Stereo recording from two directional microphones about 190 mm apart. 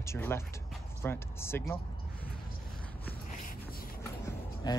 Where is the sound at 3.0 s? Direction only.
50° left (ahead or behind).